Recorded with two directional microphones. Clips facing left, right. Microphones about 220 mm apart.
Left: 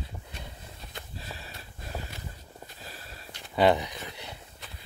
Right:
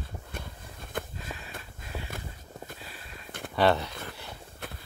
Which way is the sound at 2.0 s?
50° right (ahead or behind).